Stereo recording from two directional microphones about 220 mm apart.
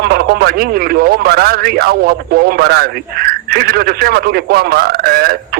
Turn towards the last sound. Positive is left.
turn(degrees=-45)  # may be behind; listen again after turning